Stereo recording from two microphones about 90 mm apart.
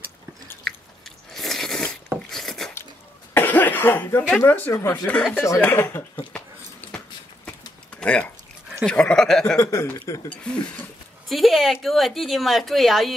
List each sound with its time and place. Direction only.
1.3 s biting: 5° left (ahead or behind)
2.2 s a sound: 5° left (ahead or behind)
3.3 s speech: 20° left (ahead or behind)
4.7 s speech: 30° left (ahead or behind)
5.0 s speech: 10° left (ahead or behind)
5.6 s speech: 25° left (ahead or behind)
6.3 s a sound: 15° left (ahead or behind)
8.8 s speech: 10° left (ahead or behind)
9.6 s speech: 35° left (ahead or behind)
10.3 s speech: 15° left (ahead or behind)
11.2 s speech: centre (ahead or behind)